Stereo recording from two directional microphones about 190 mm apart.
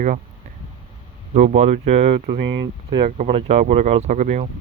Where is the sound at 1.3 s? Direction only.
35° right (ahead or behind).